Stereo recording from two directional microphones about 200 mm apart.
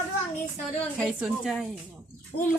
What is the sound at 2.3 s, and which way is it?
Speech, 65° left (ahead or behind).